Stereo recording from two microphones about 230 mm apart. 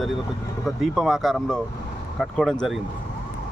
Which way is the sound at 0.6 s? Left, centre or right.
Centre.